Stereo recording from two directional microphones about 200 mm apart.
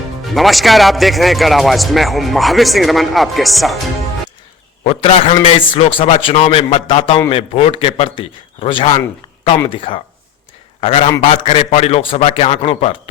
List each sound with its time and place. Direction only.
0.3 s speech: centre (ahead or behind)
4.8 s a man's voice: 30° left (ahead or behind)